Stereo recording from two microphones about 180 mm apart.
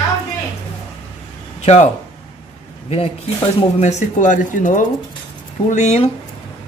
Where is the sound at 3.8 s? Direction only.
40° left (ahead or behind).